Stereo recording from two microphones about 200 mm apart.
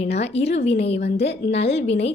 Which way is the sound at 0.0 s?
30° left (ahead or behind).